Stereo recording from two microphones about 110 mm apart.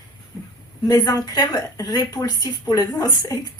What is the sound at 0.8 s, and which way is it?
Speech, 35° left (ahead or behind).